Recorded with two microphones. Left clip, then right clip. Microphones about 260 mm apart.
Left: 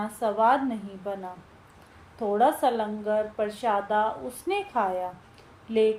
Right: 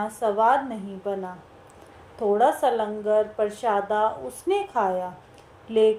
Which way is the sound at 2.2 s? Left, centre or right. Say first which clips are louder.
Right 2 dB; right.